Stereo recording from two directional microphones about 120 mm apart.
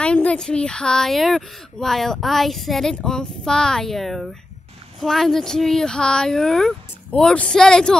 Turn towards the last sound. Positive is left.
turn(degrees=5)  # may be behind; listen again after turning